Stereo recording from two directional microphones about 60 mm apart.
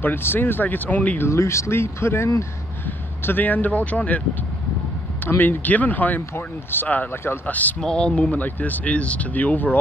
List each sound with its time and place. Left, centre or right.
0.0 s speech: left
1.2 s speech: left
3.2 s speech: left
5.4 s speech: left
7.8 s speech: centre
8.2 s speech: left